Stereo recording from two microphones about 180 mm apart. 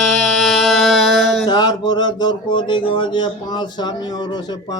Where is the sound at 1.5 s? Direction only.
25° left (ahead or behind).